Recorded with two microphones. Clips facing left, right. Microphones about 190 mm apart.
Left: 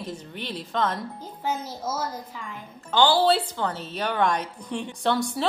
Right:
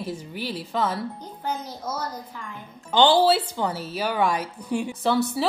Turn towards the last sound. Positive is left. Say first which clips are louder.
# right 2 dB
turn(degrees=-5)  # may be behind; listen again after turning